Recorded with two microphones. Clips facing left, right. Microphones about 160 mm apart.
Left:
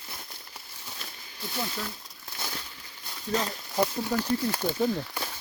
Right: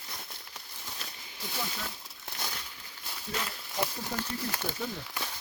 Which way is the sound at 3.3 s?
35° left (ahead or behind).